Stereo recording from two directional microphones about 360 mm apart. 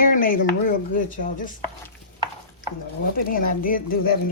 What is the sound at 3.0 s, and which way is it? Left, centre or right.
Speech, left.